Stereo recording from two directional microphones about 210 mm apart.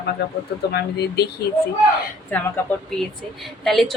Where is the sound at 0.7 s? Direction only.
50° left (ahead or behind).